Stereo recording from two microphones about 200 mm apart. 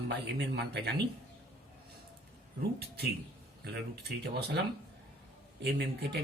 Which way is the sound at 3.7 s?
55° right (ahead or behind).